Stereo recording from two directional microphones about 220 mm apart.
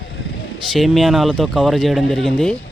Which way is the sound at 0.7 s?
Centre (ahead or behind).